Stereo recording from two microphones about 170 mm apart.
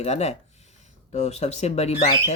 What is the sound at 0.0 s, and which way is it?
Speech, 40° left (ahead or behind).